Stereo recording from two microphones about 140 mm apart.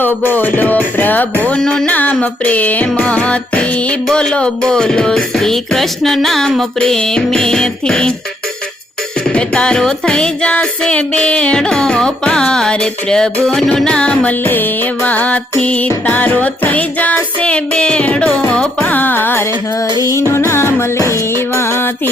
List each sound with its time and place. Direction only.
0.0 s music: 15° left (ahead or behind)
9.3 s music: 5° left (ahead or behind)